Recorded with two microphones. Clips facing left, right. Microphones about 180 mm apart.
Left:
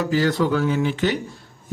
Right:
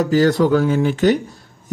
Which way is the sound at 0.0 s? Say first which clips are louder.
Right 5 dB; 40° right (ahead or behind).